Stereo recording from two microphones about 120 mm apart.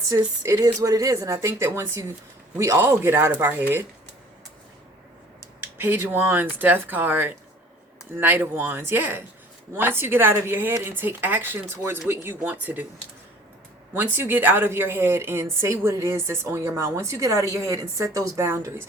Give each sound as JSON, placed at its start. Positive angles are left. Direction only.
{"t": 0.4, "sound": "a woman's voice", "side_deg": -30}
{"t": 5.5, "sound": "a woman's voice", "side_deg": -15}
{"t": 13.9, "sound": "a woman's voice", "side_deg": -15}